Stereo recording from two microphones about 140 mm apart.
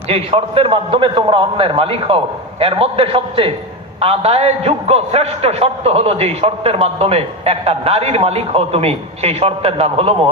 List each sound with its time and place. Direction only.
0.1 s a man's voice: 45° right (ahead or behind)